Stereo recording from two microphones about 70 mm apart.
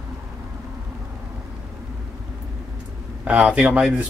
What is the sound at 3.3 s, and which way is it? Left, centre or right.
Speech, centre.